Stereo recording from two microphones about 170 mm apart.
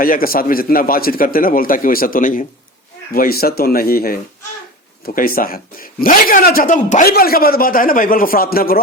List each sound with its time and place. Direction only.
0.0 s speech: 55° left (ahead or behind)